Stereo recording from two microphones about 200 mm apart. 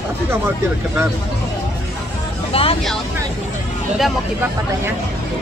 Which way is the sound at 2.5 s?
30° left (ahead or behind).